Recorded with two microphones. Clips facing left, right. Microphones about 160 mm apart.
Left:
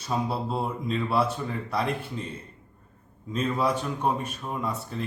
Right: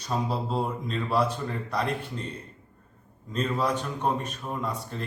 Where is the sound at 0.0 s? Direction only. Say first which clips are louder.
Left 1 dB; 5° left (ahead or behind).